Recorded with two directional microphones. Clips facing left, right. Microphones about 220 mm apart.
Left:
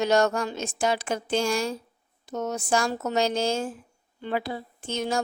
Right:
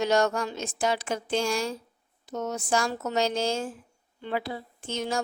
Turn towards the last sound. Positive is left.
turn(degrees=50)  # may be behind; listen again after turning